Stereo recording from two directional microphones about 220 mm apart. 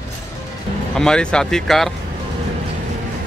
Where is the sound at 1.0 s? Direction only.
5° left (ahead or behind).